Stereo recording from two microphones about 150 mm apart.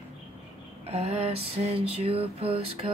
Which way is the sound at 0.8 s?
45° right (ahead or behind).